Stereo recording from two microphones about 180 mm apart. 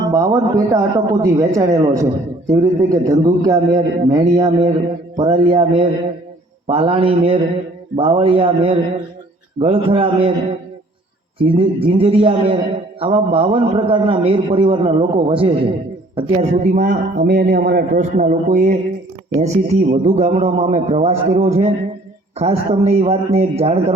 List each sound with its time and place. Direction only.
0.1 s a man's voice: 15° right (ahead or behind)
11.3 s a man's voice: 30° right (ahead or behind)